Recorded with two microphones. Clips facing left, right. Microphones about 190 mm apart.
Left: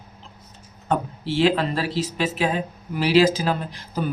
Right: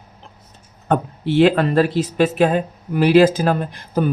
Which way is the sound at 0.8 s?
55° right (ahead or behind).